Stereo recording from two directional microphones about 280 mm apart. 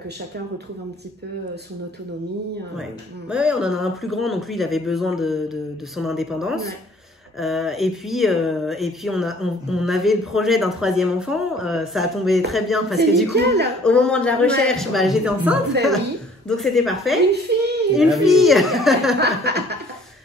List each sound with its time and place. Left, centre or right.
3.3 s speech: centre
17.5 s baby cry: right
17.9 s speech: centre
19.1 s chuckle: right